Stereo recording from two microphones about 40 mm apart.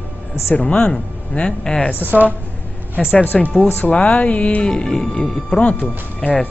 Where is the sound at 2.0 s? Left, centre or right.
Right.